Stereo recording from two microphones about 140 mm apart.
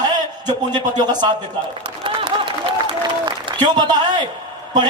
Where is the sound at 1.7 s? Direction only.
40° right (ahead or behind).